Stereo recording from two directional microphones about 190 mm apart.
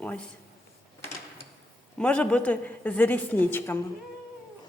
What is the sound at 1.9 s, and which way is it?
A woman's voice, 5° left (ahead or behind).